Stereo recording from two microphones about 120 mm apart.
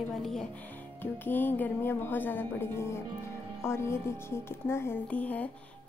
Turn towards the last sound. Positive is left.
turn(degrees=10)  # may be behind; listen again after turning